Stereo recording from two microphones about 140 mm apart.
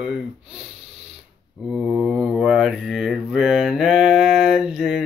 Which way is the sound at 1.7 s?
Centre (ahead or behind).